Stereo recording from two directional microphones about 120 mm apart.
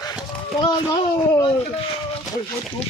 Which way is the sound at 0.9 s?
30° left (ahead or behind).